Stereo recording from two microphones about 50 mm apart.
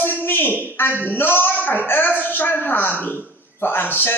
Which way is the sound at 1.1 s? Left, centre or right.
Left.